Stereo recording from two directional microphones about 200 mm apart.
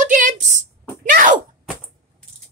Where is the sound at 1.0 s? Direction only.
45° right (ahead or behind).